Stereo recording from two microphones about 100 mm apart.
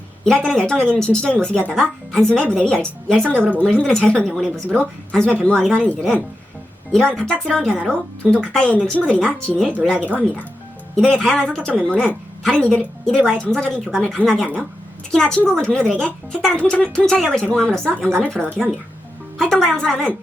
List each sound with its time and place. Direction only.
0.3 s a woman's voice: 5° left (ahead or behind)